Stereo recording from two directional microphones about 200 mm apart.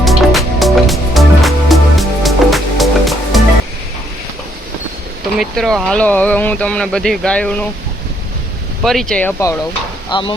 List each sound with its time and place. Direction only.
0.0 s music: centre (ahead or behind)
5.4 s speech: centre (ahead or behind)
8.8 s speech: centre (ahead or behind)
10.1 s speech: 25° left (ahead or behind)